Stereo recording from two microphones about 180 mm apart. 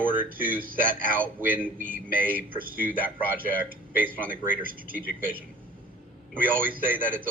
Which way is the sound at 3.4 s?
10° right (ahead or behind).